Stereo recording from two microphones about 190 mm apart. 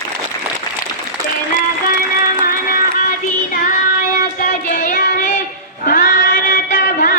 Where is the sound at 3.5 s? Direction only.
45° left (ahead or behind).